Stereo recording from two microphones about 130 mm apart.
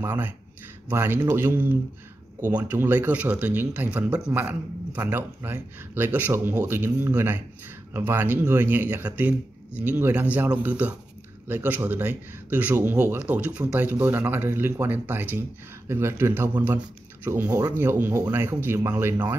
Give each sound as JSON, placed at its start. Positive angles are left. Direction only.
{"t": 0.0, "sound": "speech", "side_deg": -15}